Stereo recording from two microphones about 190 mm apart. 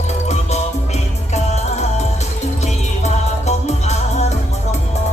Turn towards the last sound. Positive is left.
turn(degrees=35)  # may be behind; listen again after turning